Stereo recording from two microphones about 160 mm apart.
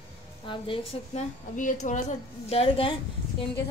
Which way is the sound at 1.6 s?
50° left (ahead or behind).